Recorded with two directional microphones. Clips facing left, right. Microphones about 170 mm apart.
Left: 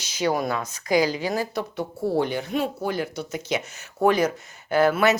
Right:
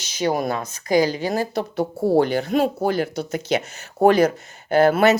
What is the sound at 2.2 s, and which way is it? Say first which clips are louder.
Speech: right 6 dB; 85° right.